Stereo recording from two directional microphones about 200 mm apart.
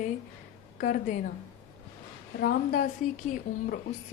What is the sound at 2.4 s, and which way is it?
A woman's voice, 45° left (ahead or behind).